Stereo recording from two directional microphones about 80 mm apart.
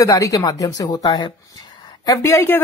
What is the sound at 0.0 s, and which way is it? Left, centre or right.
Speech, left.